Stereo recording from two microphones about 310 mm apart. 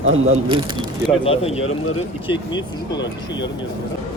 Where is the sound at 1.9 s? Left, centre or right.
Centre.